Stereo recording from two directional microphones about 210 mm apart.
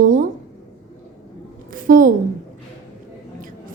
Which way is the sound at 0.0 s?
40° right (ahead or behind).